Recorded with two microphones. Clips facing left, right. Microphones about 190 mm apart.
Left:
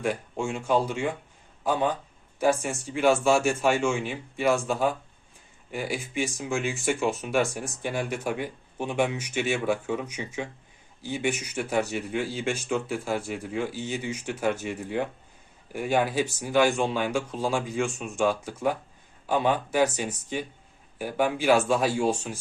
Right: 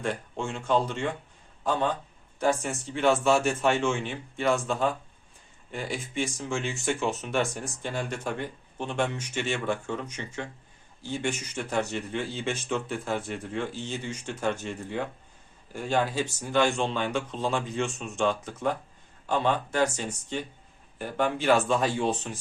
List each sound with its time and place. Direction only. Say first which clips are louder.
0.0 s speech: left 3 dB; 10° left (ahead or behind)